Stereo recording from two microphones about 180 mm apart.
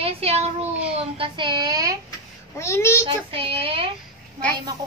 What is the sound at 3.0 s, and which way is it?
Speech, 30° right (ahead or behind).